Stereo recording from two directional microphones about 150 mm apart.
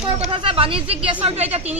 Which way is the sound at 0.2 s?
40° right (ahead or behind).